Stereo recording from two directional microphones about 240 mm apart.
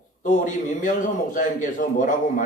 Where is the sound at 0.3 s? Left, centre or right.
Left.